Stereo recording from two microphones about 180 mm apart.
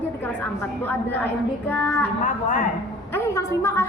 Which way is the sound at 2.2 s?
45° left (ahead or behind).